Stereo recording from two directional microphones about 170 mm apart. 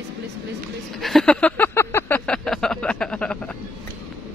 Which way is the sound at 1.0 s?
5° left (ahead or behind).